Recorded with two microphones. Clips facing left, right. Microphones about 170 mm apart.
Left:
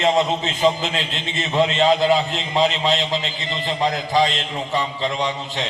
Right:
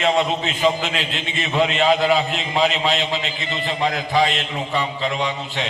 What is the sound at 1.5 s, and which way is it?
Speech, 20° left (ahead or behind).